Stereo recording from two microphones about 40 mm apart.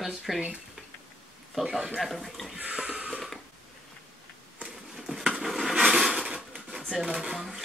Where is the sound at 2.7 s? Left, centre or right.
Right.